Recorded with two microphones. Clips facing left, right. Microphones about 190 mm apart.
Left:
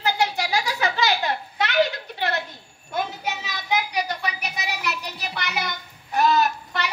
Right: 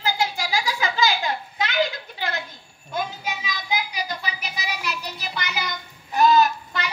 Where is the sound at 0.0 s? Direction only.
65° left (ahead or behind).